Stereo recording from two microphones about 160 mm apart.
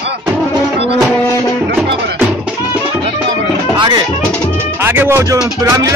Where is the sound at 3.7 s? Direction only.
25° right (ahead or behind).